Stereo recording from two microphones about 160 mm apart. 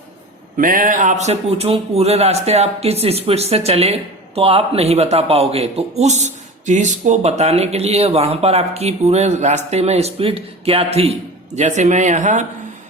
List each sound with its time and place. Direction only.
0.5 s a man's voice: 60° right (ahead or behind)